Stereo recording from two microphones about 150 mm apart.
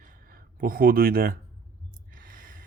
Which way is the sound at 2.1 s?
65° right (ahead or behind).